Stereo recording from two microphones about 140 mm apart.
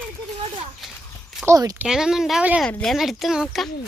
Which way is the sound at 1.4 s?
25° right (ahead or behind).